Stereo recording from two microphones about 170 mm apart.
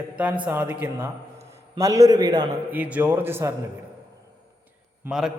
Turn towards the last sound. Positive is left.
turn(degrees=0)  # may be behind; listen again after turning